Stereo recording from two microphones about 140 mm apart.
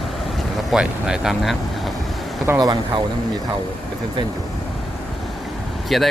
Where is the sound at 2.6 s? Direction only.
30° right (ahead or behind).